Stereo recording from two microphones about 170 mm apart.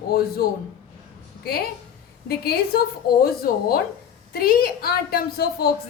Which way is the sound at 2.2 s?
65° left (ahead or behind).